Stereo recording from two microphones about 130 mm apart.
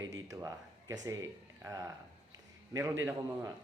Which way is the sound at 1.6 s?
25° right (ahead or behind).